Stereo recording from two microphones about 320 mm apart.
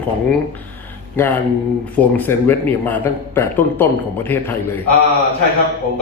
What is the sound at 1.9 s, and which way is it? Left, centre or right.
A man's voice, centre.